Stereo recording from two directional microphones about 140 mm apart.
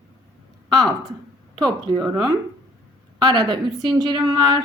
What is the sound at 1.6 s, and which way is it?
Speech, 30° right (ahead or behind).